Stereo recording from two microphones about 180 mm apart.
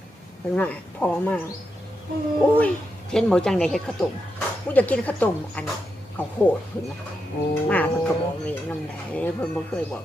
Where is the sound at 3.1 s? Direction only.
5° left (ahead or behind).